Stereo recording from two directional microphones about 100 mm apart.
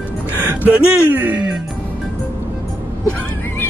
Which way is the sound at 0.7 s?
20° right (ahead or behind).